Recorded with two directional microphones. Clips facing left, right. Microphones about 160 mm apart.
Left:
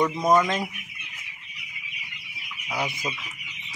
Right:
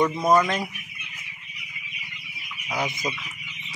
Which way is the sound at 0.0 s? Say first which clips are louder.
Right 1 dB; 5° right (ahead or behind).